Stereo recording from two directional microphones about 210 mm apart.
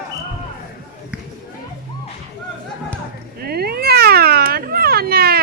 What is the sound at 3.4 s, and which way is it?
Cat, 50° right (ahead or behind).